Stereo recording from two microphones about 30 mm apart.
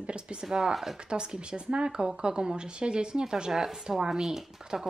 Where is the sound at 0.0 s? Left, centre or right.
Right.